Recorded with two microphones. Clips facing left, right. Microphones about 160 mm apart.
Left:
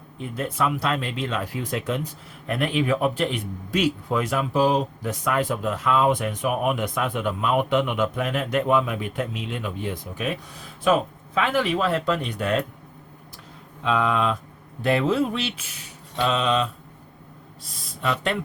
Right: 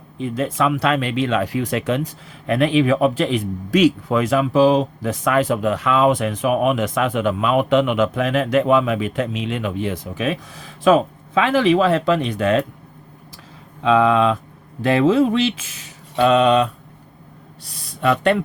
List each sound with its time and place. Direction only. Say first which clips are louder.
0.2 s speech: right 6 dB; 90° right
13.8 s speech: right 7 dB; 90° right
16.1 s mantra: right 8 dB; 60° right (ahead or behind)
17.6 s speech: right 8 dB; 70° right (ahead or behind)